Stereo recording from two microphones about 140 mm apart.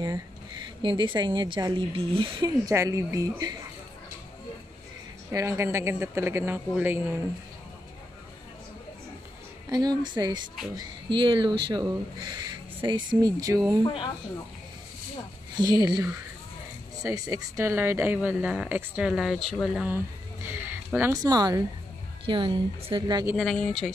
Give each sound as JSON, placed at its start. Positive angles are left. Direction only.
{"t": 0.8, "sound": "speech", "side_deg": -35}
{"t": 5.3, "sound": "a woman's voice", "side_deg": -20}
{"t": 9.7, "sound": "speech", "side_deg": -30}
{"t": 13.8, "sound": "speech", "side_deg": 35}
{"t": 15.5, "sound": "a woman's voice", "side_deg": -30}
{"t": 20.4, "sound": "a sound", "side_deg": -15}
{"t": 21.1, "sound": "speech", "side_deg": -25}
{"t": 23.3, "sound": "speech", "side_deg": 5}